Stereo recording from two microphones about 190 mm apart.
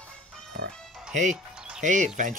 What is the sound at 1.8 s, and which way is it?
Speech, 40° right (ahead or behind).